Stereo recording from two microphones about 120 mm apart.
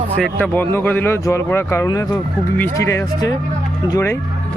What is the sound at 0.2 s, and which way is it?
Speech, 10° left (ahead or behind).